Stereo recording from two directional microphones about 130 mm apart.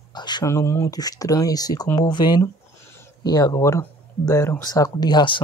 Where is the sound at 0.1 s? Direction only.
35° left (ahead or behind).